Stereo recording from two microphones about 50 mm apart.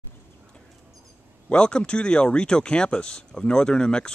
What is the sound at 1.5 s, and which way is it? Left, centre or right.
Speech, centre.